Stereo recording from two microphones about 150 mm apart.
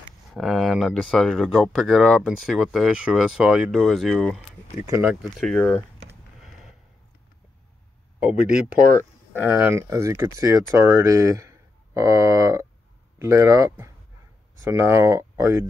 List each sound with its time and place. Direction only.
0.3 s speech: centre (ahead or behind)
4.4 s speech: 10° right (ahead or behind)
8.4 s speech: 85° right
9.3 s speech: 10° right (ahead or behind)